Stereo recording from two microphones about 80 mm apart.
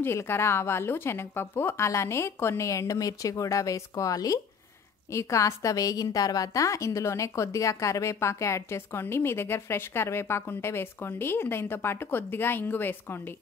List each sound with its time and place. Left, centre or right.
0.0 s a woman's voice: left